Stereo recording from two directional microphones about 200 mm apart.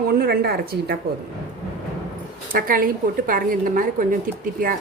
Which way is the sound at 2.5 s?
45° right (ahead or behind).